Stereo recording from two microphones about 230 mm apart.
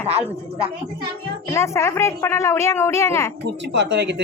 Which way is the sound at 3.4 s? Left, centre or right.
Right.